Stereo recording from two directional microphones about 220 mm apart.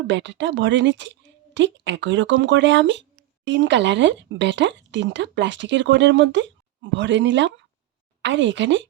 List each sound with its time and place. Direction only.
0.1 s speech: 55° right (ahead or behind)